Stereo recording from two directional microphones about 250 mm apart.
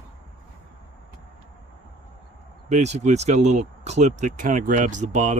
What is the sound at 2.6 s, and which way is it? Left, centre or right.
Speech, right.